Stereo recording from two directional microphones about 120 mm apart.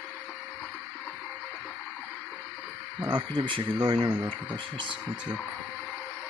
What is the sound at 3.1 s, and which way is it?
Speech, 45° right (ahead or behind).